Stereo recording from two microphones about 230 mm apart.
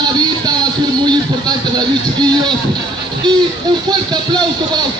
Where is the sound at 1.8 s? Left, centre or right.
Centre.